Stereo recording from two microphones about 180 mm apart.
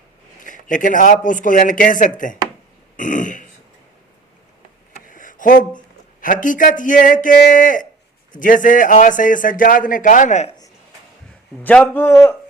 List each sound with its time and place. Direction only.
0.4 s a man's voice: 45° left (ahead or behind)
5.0 s a sound: 45° left (ahead or behind)
6.2 s a man's voice: 45° left (ahead or behind)
11.6 s a man's voice: 10° left (ahead or behind)